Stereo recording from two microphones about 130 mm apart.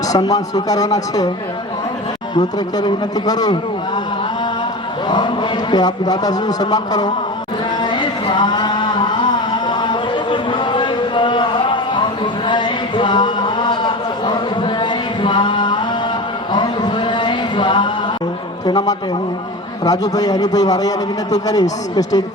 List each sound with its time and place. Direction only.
0.1 s a man's voice: 30° left (ahead or behind)
2.3 s a man's voice: 35° left (ahead or behind)
5.0 s a man's voice: 40° left (ahead or behind)
7.8 s a sound: 35° left (ahead or behind)
19.8 s a man's voice: 30° left (ahead or behind)